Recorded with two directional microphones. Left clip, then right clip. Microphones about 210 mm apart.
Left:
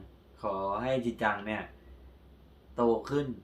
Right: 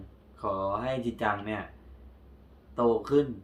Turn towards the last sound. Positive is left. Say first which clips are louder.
# right 4 dB
turn(degrees=0)  # may be behind; listen again after turning